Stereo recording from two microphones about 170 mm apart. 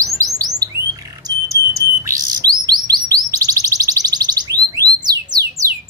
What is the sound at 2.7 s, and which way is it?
Chirp, 25° right (ahead or behind).